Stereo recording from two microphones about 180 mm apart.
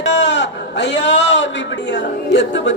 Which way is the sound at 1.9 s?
80° left.